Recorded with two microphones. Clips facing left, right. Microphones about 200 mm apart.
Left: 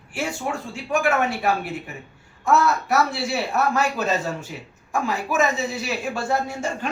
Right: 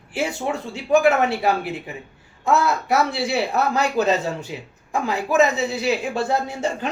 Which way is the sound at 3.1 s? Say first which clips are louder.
Right 3 dB; 20° right (ahead or behind).